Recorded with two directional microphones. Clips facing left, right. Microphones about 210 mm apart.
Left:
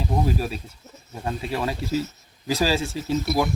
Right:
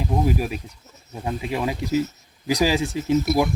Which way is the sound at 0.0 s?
15° right (ahead or behind).